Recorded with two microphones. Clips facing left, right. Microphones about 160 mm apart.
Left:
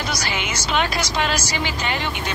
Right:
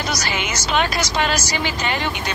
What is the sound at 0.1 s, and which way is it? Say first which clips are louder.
Speech: right 2 dB; 40° right (ahead or behind).